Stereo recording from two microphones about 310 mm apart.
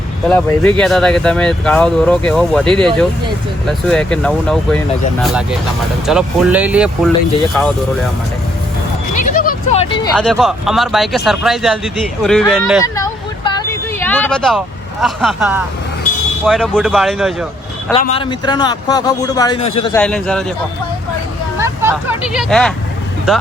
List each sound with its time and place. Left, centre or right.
0.3 s speech: centre
9.1 s a sound: left
10.2 s speech: centre
12.8 s vehicle: centre
15.0 s speech: centre
18.0 s a man's voice: centre
20.0 s speech: centre
21.6 s speech: centre